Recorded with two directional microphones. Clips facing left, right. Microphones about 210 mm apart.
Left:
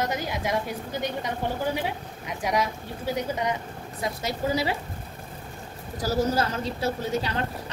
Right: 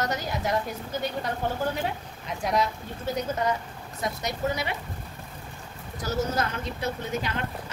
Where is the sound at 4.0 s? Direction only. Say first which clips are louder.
Even; 30° left (ahead or behind).